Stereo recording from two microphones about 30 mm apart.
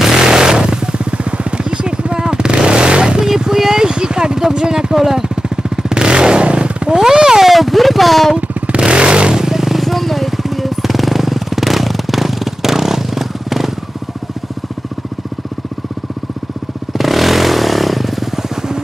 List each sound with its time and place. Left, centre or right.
0.2 s a sound: right
1.1 s vehicle: right
3.2 s a sound: right
5.3 s vehicle: right
7.0 s a sound: centre
7.4 s music: centre
8.4 s motorcycle: right
8.7 s vehicle: right
9.3 s vehicle: centre
9.8 s jackhammer: centre
17.0 s vehicle: centre